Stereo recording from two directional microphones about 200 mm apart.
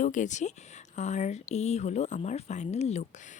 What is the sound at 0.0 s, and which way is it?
Speech, 40° left (ahead or behind).